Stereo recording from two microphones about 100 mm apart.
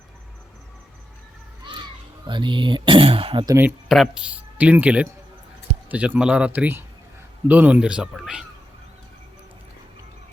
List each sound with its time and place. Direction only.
1.7 s children playing: 55° right (ahead or behind)
2.2 s speech: 50° right (ahead or behind); by 3.4 s 70° right (ahead or behind)
3.8 s speech: centre (ahead or behind)